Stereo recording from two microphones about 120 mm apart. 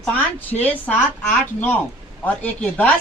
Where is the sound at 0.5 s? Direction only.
Centre (ahead or behind).